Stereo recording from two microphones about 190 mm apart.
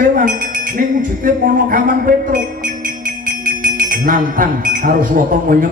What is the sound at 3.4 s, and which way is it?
Speech, 45° right (ahead or behind).